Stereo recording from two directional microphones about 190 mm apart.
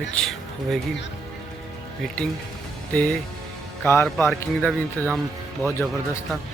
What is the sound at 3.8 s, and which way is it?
Speech, 10° left (ahead or behind).